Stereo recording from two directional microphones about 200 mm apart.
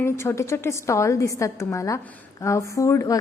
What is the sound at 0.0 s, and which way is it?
A woman's voice, 15° left (ahead or behind).